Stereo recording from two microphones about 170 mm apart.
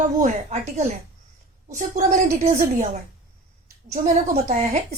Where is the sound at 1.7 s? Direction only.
45° right (ahead or behind).